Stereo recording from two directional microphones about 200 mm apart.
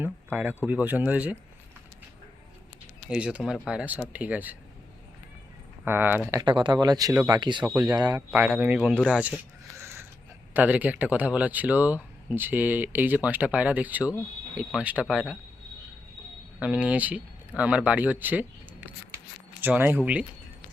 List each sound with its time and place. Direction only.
0.0 s speech: 10° right (ahead or behind)
3.1 s speech: 5° right (ahead or behind)
5.8 s speech: 10° right (ahead or behind)
7.6 s speech: 5° right (ahead or behind)
7.9 s speech: 20° right (ahead or behind)
8.3 s speech: 10° right (ahead or behind)
16.6 s speech: 5° right (ahead or behind)
19.6 s speech: 10° right (ahead or behind)